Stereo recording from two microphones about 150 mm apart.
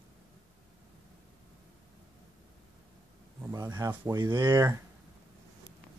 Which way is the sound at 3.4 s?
25° right (ahead or behind).